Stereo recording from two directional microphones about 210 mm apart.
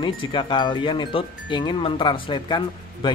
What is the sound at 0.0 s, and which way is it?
Speech, 25° left (ahead or behind).